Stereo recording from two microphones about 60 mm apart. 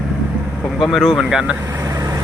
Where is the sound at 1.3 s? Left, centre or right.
Centre.